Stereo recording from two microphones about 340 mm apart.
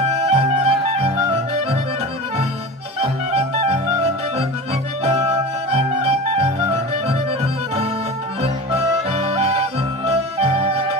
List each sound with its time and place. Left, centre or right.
0.1 s music: centre
3.0 s music: centre